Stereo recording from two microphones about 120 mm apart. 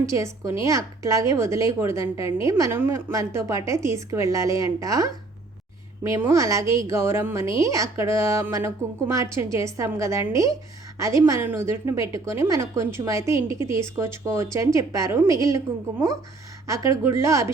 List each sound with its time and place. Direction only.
0.0 s a woman's voice: 25° right (ahead or behind)
6.1 s a woman's voice: 20° right (ahead or behind)